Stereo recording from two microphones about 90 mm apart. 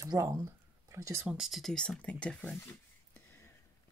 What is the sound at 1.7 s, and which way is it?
Speech, 10° left (ahead or behind).